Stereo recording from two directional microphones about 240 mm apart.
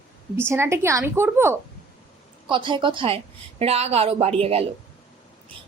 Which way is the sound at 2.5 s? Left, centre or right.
Centre.